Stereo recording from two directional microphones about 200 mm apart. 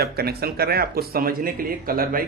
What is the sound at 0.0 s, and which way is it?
Speech, 50° right (ahead or behind).